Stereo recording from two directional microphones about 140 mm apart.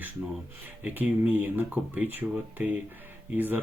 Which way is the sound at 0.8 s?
10° right (ahead or behind).